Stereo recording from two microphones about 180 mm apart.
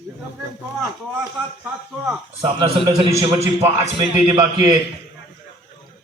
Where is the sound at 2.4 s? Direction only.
20° right (ahead or behind).